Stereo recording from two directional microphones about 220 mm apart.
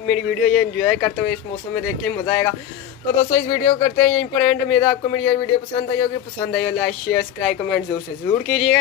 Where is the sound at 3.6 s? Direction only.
5° left (ahead or behind).